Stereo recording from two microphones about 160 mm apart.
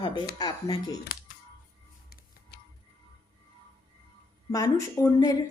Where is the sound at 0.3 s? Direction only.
25° left (ahead or behind).